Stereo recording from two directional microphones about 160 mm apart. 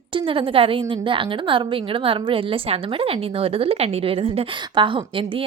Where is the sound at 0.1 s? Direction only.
35° right (ahead or behind).